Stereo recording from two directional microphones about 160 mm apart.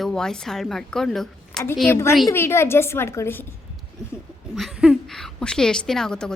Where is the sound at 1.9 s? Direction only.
15° left (ahead or behind).